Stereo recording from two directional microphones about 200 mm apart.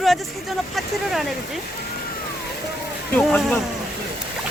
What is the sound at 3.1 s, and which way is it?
Speech, 5° left (ahead or behind).